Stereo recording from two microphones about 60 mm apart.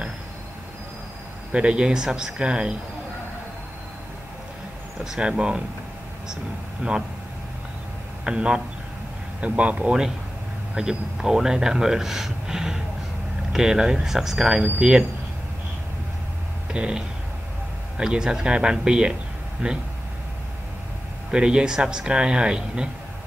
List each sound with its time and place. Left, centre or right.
1.5 s speech: centre
5.0 s speech: centre
6.8 s speech: right
8.2 s a man's voice: centre
16.7 s speech: centre
21.3 s speech: centre